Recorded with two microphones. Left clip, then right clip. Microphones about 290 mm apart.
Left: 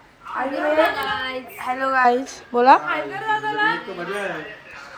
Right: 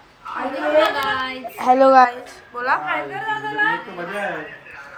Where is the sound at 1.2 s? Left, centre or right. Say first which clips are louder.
Right 4 dB; right.